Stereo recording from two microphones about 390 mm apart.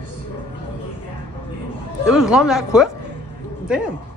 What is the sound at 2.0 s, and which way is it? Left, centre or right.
Speech, centre.